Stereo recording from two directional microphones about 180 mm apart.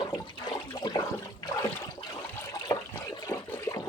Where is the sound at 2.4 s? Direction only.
20° left (ahead or behind).